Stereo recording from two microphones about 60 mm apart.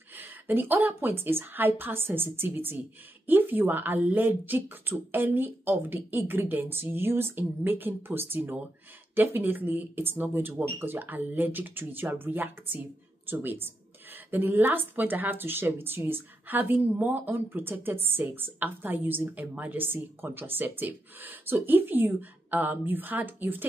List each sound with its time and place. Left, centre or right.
0.1 s a woman's voice: right